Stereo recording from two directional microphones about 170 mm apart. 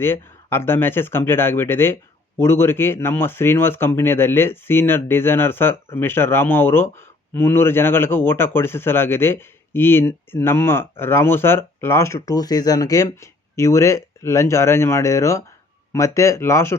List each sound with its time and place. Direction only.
0.0 s speech: 15° left (ahead or behind)